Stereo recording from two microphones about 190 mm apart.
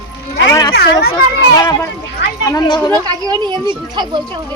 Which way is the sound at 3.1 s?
20° right (ahead or behind).